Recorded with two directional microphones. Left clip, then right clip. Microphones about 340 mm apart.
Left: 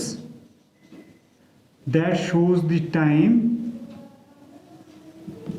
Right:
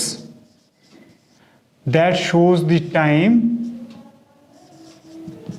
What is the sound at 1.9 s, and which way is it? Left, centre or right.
A man's voice, right.